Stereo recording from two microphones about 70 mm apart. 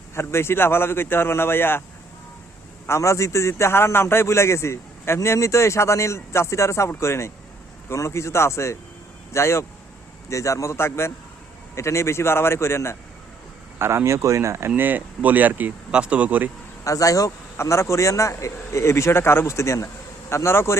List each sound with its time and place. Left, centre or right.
0.1 s a man's voice: left
2.8 s a man's voice: left
13.7 s speech: right
14.8 s speech: right
16.8 s speech: left
17.6 s a man's voice: left